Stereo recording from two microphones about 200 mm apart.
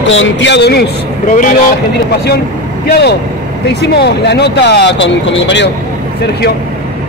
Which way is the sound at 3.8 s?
55° left (ahead or behind).